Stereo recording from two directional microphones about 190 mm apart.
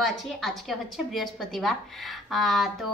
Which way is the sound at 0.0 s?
Centre (ahead or behind).